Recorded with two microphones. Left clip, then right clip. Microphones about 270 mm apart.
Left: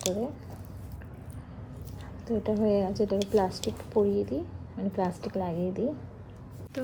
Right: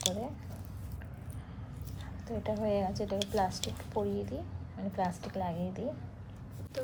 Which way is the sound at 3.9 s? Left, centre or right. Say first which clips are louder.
Left 9 dB; left.